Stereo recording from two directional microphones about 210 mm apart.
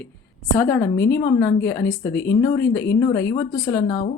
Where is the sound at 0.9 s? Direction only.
55° left (ahead or behind).